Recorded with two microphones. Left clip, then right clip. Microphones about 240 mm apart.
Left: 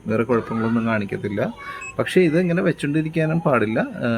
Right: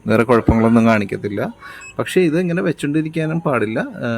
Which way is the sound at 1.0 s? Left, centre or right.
Centre.